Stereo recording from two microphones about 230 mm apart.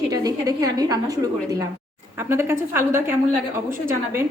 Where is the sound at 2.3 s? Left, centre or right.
Centre.